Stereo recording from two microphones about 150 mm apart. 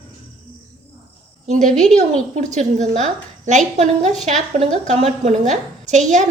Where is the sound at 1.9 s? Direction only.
50° right (ahead or behind).